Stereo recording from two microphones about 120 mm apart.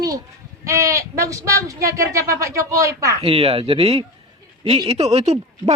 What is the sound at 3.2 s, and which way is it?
Speech, 55° right (ahead or behind).